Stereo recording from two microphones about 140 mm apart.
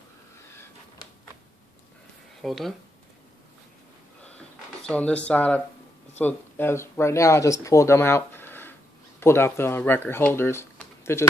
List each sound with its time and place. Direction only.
2.4 s speech: centre (ahead or behind)
4.8 s speech: 10° left (ahead or behind)